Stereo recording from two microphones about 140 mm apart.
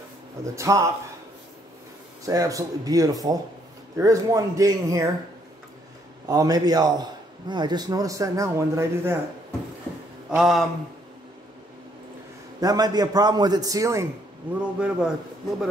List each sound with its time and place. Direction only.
0.6 s a man's voice: 25° right (ahead or behind)
2.2 s a man's voice: 25° right (ahead or behind)
6.2 s a man's voice: 25° right (ahead or behind)
10.3 s mantra: centre (ahead or behind)
12.5 s a man's voice: 30° right (ahead or behind)
14.5 s a man's voice: 5° right (ahead or behind)